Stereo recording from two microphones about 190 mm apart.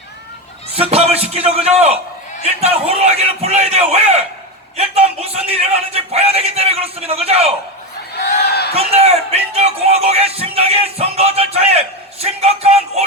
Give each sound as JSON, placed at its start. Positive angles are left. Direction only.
{"t": 0.8, "sound": "speech", "side_deg": -30}
{"t": 8.2, "sound": "a sound", "side_deg": 60}
{"t": 8.7, "sound": "speech", "side_deg": -30}